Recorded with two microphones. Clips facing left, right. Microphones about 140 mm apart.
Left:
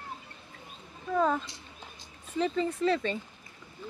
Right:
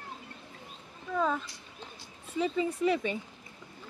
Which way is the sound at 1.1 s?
10° left (ahead or behind).